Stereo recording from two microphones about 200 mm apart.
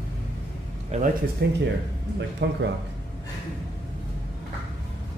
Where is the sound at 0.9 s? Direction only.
35° right (ahead or behind).